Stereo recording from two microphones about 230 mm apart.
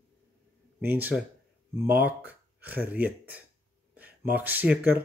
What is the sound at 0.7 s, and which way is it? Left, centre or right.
Speech, centre.